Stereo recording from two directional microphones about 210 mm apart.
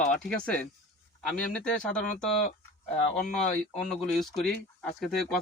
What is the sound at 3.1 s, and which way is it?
Speech, centre (ahead or behind).